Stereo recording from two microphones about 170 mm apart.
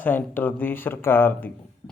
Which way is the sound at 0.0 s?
10° left (ahead or behind).